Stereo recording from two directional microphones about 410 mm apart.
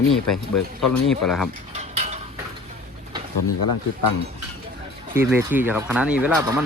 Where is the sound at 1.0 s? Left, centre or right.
Centre.